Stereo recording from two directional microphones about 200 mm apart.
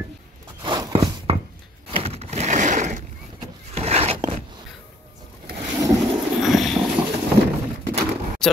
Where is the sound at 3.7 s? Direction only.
30° right (ahead or behind).